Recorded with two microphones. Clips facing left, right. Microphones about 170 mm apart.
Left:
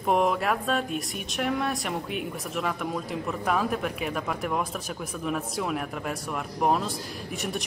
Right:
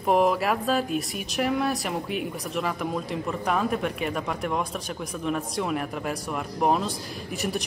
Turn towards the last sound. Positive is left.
turn(degrees=0)  # may be behind; listen again after turning